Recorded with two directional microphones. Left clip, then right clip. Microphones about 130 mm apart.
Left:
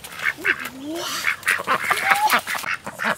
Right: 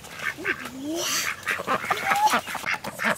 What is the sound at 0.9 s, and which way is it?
Duck, centre (ahead or behind).